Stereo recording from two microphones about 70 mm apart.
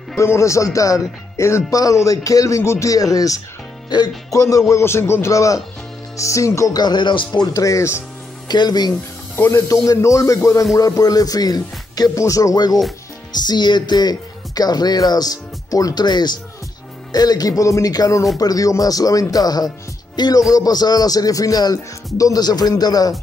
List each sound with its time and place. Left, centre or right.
0.2 s speech: left
2.9 s speech: left
6.7 s music: left
7.4 s speech: left
8.5 s speech: left
9.5 s speech: left
12.2 s speech: left
13.3 s speech: left
17.1 s speech: left